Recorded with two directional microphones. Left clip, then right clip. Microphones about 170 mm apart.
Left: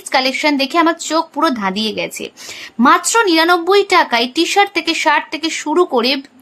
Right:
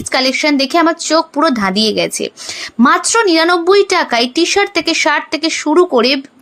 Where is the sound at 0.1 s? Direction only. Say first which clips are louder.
Right 1 dB; 25° right (ahead or behind).